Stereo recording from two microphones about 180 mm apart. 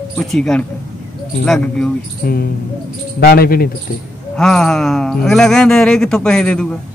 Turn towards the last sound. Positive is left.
turn(degrees=5)  # may be behind; listen again after turning